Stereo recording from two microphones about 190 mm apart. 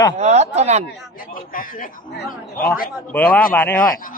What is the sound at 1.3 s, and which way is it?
Speech, 50° left (ahead or behind).